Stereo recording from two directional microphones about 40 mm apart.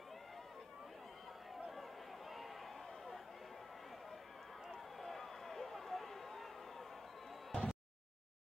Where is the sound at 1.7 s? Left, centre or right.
Centre.